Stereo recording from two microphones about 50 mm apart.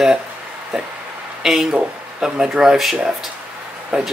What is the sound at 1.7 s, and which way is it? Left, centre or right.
Speech, centre.